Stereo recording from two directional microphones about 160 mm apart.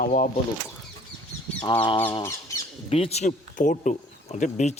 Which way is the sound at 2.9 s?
40° left (ahead or behind).